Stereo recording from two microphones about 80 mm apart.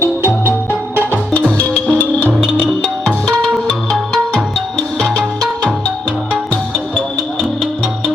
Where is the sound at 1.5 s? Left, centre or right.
Centre.